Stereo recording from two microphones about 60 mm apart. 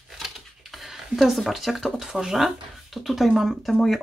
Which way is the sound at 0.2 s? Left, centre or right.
Centre.